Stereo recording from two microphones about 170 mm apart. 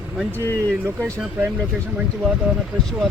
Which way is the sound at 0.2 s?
10° right (ahead or behind).